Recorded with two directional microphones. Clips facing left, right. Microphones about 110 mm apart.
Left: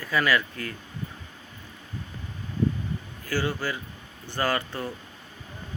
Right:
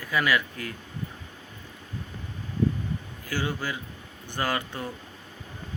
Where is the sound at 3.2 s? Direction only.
15° right (ahead or behind).